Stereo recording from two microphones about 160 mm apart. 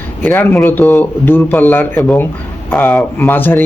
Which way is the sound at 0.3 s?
15° left (ahead or behind).